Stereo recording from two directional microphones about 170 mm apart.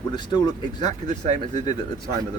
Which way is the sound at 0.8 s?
45° right (ahead or behind).